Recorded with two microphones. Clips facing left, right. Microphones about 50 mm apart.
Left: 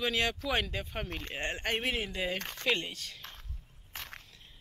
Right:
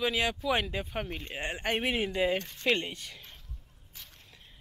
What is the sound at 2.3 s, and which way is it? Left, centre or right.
Speech, left.